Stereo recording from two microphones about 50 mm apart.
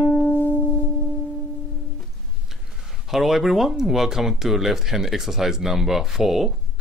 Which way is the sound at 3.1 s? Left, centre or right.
Centre.